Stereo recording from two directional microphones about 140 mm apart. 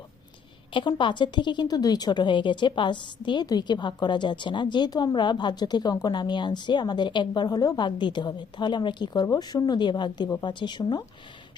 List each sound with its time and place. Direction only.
0.7 s a woman's voice: 35° left (ahead or behind)